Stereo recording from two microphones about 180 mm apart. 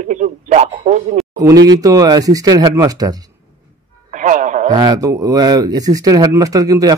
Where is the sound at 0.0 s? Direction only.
40° right (ahead or behind).